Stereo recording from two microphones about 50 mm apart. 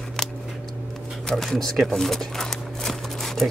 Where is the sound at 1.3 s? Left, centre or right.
Centre.